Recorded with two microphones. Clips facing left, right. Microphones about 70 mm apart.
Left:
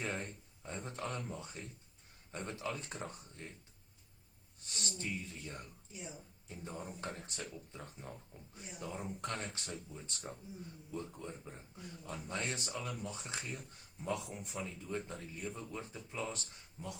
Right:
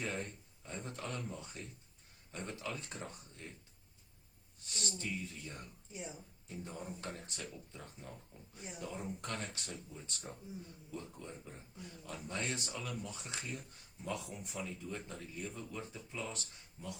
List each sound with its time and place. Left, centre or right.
0.0 s speech: left
4.9 s speech: left
5.9 s speech: right
6.5 s speech: left